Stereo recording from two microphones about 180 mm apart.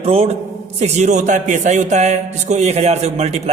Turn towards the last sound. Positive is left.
turn(degrees=-35)  # may be behind; listen again after turning